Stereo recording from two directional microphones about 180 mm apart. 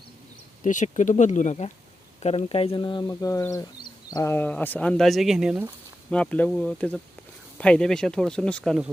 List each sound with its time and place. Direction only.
0.6 s speech: 45° left (ahead or behind); by 8.9 s centre (ahead or behind)